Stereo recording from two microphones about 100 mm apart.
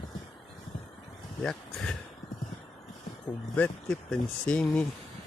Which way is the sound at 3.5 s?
15° left (ahead or behind).